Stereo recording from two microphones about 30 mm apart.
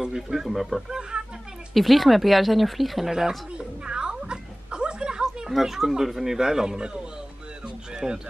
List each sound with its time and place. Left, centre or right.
0.0 s speech: centre
0.5 s speech: centre
0.8 s speech: right
1.7 s speech: centre
3.1 s speech: centre
3.5 s music: right
5.5 s speech: centre
7.6 s a sound: right